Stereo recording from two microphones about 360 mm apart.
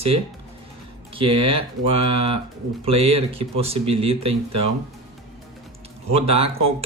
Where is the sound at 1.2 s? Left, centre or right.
Centre.